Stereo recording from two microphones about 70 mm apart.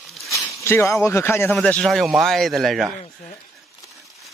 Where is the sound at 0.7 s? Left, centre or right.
Left.